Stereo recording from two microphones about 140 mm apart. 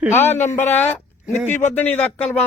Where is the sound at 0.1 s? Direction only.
15° left (ahead or behind).